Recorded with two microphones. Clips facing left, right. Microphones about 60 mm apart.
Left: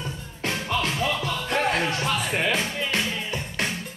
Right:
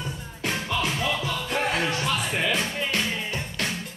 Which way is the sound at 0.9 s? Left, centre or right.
Centre.